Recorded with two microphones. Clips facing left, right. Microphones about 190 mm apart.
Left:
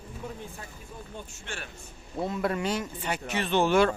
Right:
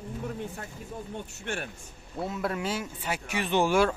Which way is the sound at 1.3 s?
60° right (ahead or behind).